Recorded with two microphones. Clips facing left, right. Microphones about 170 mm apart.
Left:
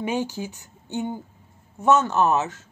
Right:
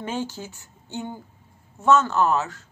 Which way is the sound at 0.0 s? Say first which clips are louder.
Left 3 dB; 15° left (ahead or behind).